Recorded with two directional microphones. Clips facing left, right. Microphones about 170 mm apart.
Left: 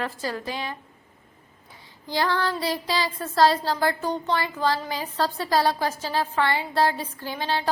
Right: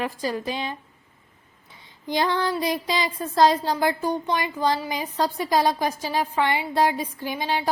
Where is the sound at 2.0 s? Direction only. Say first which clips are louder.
Right 1 dB; 20° right (ahead or behind).